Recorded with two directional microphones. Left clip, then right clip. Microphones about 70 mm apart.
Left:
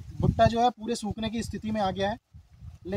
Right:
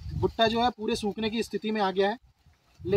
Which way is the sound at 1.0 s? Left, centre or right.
Left.